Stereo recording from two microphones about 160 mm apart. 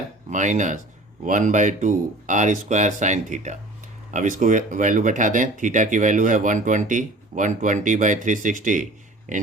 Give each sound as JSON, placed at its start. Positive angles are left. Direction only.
{"t": 0.3, "sound": "speech", "side_deg": -50}